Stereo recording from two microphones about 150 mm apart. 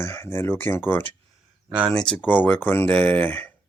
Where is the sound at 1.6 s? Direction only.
10° right (ahead or behind).